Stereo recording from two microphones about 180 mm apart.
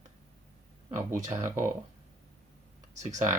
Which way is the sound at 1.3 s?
15° right (ahead or behind).